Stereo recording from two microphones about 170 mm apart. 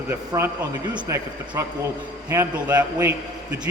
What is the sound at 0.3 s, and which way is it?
A man's voice, 20° right (ahead or behind).